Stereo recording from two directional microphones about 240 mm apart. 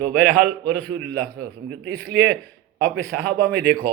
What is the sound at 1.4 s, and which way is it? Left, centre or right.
A man's voice, right.